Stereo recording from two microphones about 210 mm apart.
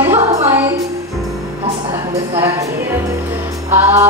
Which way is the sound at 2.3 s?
15° right (ahead or behind).